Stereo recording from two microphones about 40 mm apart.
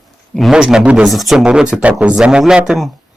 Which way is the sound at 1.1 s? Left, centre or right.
Centre.